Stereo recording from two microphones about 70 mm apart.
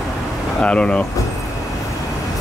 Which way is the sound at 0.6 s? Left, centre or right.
Centre.